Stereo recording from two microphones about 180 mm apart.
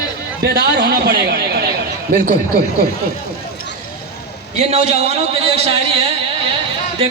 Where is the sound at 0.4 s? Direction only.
65° right (ahead or behind).